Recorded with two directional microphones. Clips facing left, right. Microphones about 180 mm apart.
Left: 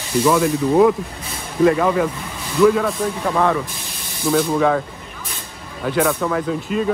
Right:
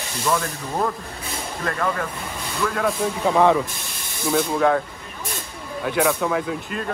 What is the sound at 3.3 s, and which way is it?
Speech, 15° right (ahead or behind).